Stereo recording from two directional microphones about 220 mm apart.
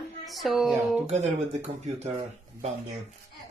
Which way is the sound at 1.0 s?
30° right (ahead or behind).